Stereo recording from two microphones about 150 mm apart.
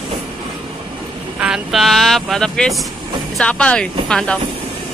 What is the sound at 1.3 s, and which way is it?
Speech, 5° right (ahead or behind).